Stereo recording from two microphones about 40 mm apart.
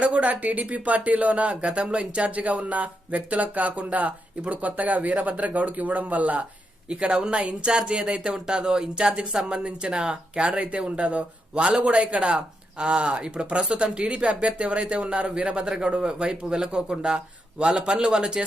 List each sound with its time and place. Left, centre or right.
0.0 s speech: right
6.8 s speech: right
10.4 s speech: right
15.6 s speech: centre